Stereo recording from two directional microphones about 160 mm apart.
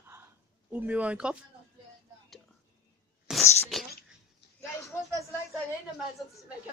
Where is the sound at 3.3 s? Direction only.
5° right (ahead or behind).